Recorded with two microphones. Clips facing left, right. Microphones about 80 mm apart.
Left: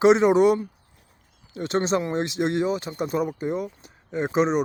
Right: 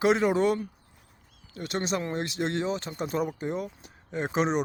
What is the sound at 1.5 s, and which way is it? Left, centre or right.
Speech, left.